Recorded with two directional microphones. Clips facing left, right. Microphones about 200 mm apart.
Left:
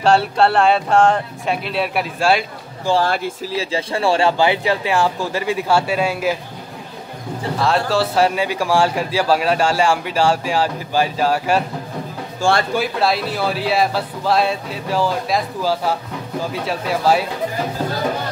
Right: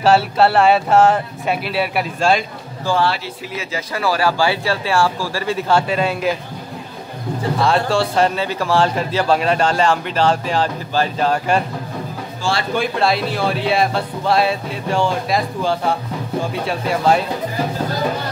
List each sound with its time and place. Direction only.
0.0 s speech: 5° right (ahead or behind)
3.5 s speech: 30° left (ahead or behind); by 6.3 s 10° left (ahead or behind)
7.5 s a man's voice: centre (ahead or behind)
12.4 s speech: 50° left (ahead or behind)
12.7 s speech: 5° left (ahead or behind)